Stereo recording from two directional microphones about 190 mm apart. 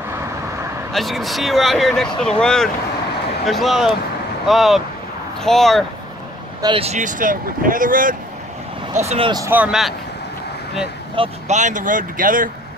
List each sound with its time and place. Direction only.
0.9 s speech: centre (ahead or behind)
6.6 s speech: 30° right (ahead or behind); by 8.2 s 45° right (ahead or behind)
8.9 s speech: 35° right (ahead or behind)
9.3 s speech: 15° right (ahead or behind)
11.1 s speech: 35° right (ahead or behind)